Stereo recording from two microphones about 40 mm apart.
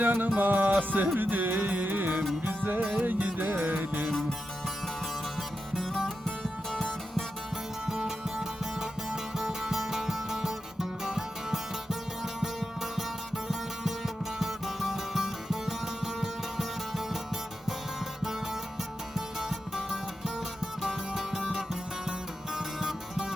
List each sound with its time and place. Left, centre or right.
0.0 s music: right
5.7 s music: centre
7.9 s music: centre
19.1 s music: centre
22.5 s music: centre